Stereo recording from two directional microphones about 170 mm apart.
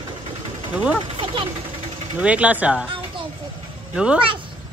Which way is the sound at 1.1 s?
30° right (ahead or behind).